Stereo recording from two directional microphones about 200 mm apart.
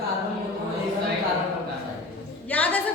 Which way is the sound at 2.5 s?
10° left (ahead or behind).